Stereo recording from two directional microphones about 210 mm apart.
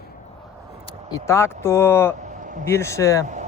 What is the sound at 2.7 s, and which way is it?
Speech, 15° left (ahead or behind).